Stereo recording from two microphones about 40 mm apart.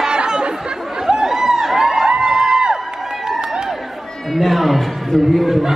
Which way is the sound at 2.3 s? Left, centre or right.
Centre.